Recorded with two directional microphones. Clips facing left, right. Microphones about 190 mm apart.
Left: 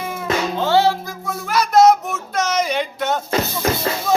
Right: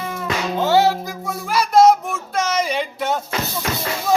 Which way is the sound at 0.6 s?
15° right (ahead or behind).